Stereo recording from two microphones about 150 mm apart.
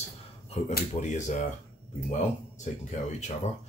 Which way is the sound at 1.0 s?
55° left (ahead or behind).